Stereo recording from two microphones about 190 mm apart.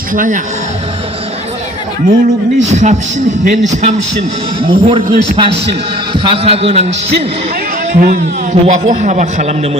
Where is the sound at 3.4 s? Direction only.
40° right (ahead or behind).